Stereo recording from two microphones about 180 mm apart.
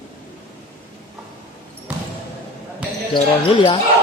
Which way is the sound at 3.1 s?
25° left (ahead or behind).